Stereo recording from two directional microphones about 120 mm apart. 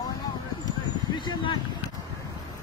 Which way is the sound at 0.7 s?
40° left (ahead or behind).